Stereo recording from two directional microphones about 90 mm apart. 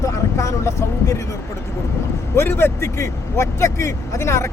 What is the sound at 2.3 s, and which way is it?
Speech, 30° left (ahead or behind).